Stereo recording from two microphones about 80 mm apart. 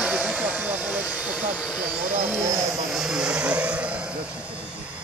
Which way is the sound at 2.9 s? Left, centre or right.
Centre.